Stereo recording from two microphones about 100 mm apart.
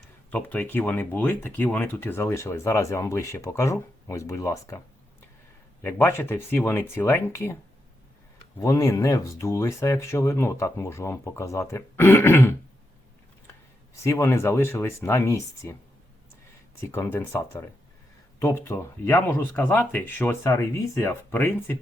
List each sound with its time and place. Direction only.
0.3 s speech: 15° left (ahead or behind)
5.8 s speech: 20° left (ahead or behind)
8.6 s speech: 30° left (ahead or behind)
13.9 s speech: 30° left (ahead or behind)
16.9 s speech: 20° left (ahead or behind)
20.4 s speech: 30° left (ahead or behind)